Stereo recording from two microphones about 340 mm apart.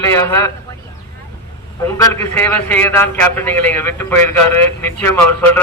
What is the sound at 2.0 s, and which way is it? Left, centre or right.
A man's voice, centre.